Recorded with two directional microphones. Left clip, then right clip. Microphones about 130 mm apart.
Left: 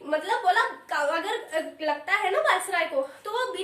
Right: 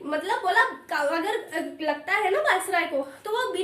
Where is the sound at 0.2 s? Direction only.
25° right (ahead or behind).